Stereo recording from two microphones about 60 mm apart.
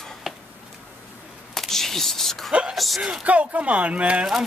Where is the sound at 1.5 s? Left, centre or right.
Centre.